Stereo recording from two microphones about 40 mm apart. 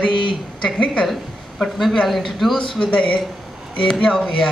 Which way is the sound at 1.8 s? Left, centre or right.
Centre.